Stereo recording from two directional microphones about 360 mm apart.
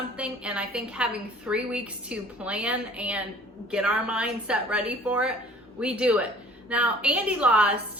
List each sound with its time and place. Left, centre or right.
0.2 s a woman's voice: centre